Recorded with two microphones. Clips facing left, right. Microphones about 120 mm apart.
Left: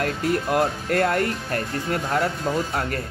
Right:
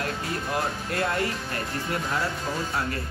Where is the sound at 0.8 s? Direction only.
55° left (ahead or behind).